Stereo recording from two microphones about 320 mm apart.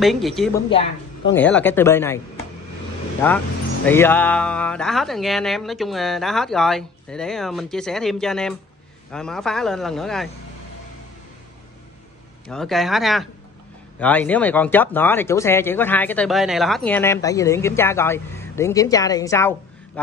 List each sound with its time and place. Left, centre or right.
0.0 s speech: centre
0.7 s speech: centre
1.3 s speech: centre
3.2 s speech: centre
12.4 s speech: centre